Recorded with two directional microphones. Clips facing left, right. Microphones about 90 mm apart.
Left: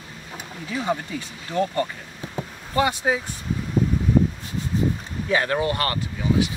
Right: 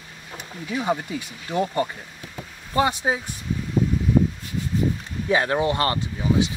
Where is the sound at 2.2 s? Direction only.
30° left (ahead or behind).